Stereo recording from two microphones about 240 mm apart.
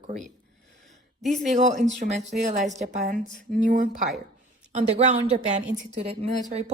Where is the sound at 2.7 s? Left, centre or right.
Right.